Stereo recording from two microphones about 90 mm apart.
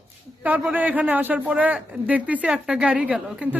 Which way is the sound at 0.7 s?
15° right (ahead or behind).